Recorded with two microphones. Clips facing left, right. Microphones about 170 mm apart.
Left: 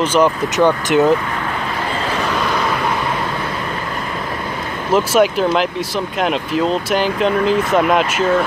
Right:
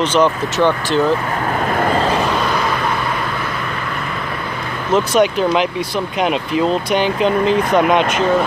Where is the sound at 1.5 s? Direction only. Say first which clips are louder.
Right 6 dB; 50° right (ahead or behind).